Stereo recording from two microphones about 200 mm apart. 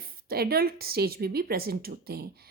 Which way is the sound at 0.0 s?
50° right (ahead or behind).